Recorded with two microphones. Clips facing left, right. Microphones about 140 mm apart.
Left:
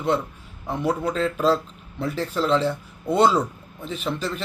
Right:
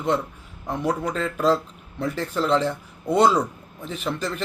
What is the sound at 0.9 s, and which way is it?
Speech, 10° left (ahead or behind).